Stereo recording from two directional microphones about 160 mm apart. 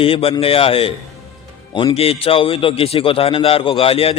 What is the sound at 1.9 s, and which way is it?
A man's voice, 35° left (ahead or behind).